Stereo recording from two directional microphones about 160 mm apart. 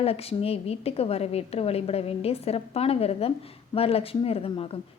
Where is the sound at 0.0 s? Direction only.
40° left (ahead or behind).